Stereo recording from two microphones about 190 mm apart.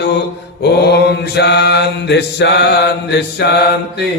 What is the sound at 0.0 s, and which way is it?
A man's voice, 60° left (ahead or behind).